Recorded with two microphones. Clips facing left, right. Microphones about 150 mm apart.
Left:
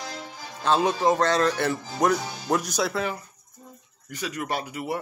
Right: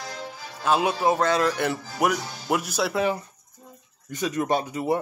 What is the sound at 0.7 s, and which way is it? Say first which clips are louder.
Speech: even; 10° right (ahead or behind).